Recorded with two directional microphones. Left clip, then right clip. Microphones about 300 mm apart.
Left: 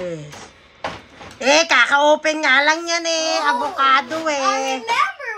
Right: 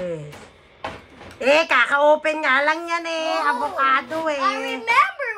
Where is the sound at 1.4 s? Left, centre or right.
Centre.